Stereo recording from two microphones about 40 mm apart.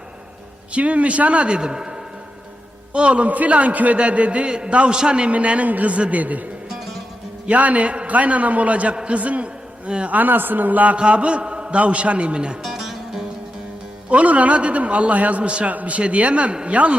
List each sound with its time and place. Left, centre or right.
0.7 s a man's voice: right
5.3 s a man's voice: right
6.7 s music: centre
7.4 s a man's voice: right
10.2 s a man's voice: right
10.9 s a man's voice: right
12.6 s music: centre
14.1 s a man's voice: right